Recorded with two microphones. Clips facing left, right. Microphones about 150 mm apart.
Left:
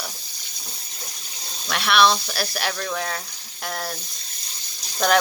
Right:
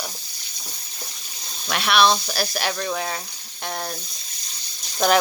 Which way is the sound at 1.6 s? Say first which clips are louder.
Even; centre (ahead or behind).